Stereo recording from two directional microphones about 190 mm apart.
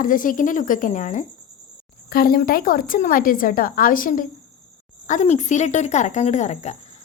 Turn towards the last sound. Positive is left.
turn(degrees=35)  # may be behind; listen again after turning